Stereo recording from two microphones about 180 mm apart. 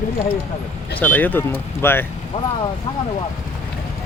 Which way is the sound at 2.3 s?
35° left (ahead or behind).